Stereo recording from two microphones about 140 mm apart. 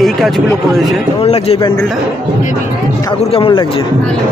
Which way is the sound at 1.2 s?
45° left (ahead or behind).